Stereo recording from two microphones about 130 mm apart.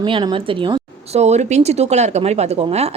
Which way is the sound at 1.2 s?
60° right (ahead or behind).